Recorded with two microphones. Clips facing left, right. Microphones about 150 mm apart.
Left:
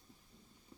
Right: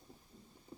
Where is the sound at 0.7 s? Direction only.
35° right (ahead or behind).